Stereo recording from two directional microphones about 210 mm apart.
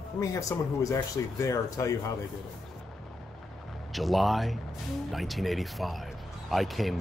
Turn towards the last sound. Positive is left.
turn(degrees=0)  # may be behind; listen again after turning